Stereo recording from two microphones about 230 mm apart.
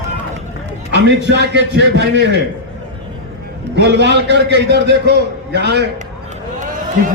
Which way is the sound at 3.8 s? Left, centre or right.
Right.